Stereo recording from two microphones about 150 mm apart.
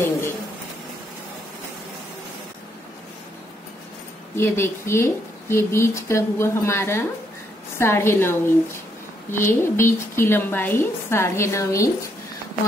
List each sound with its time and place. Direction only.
4.4 s a woman's voice: 15° left (ahead or behind)